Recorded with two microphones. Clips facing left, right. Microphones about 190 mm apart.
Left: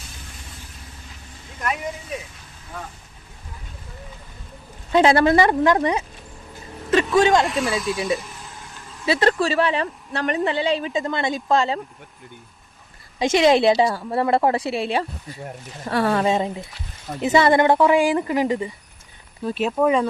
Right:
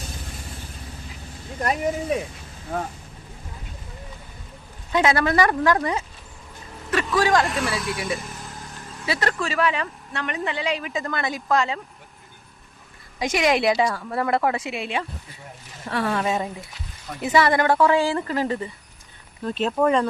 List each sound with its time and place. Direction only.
1.5 s speech: 35° right (ahead or behind)
4.9 s a woman's voice: 30° left (ahead or behind)
7.4 s speech: centre (ahead or behind)
7.9 s a woman's voice: 25° left (ahead or behind)
9.0 s speech: 25° left (ahead or behind)
13.1 s a woman's voice: 25° left (ahead or behind); by 20.1 s 5° left (ahead or behind)